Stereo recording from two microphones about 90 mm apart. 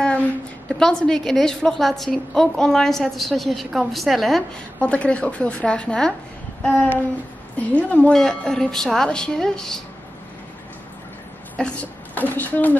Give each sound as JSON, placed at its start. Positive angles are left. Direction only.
{"t": 0.7, "sound": "a woman's voice", "side_deg": 5}
{"t": 4.7, "sound": "a woman's voice", "side_deg": 15}
{"t": 11.5, "sound": "a woman's voice", "side_deg": 15}